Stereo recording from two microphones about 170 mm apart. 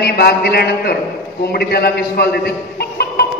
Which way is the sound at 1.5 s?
70° left (ahead or behind).